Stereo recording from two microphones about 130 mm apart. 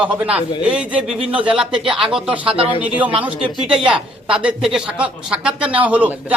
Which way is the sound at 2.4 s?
45° right (ahead or behind).